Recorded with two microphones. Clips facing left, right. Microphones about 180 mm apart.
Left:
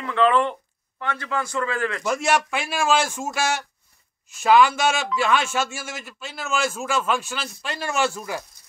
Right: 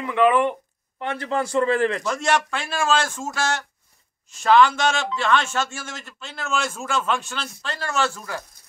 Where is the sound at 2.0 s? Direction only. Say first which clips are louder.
Left 1 dB; 10° left (ahead or behind).